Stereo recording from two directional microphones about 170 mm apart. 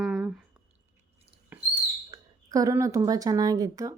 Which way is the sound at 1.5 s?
10° right (ahead or behind).